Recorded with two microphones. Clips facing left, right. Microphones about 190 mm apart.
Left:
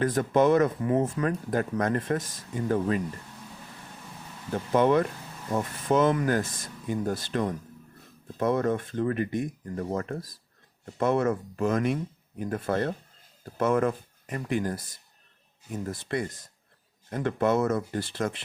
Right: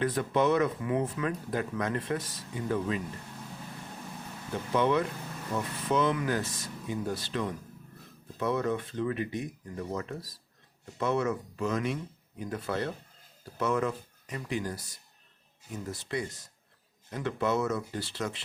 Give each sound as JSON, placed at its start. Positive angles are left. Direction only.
{"t": 0.0, "sound": "speech", "side_deg": 45}
{"t": 4.7, "sound": "speech", "side_deg": 45}